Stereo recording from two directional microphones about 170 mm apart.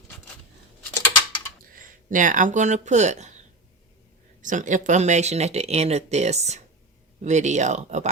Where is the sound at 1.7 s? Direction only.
50° right (ahead or behind).